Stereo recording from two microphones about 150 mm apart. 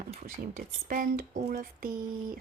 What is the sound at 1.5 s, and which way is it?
Speech, 80° right.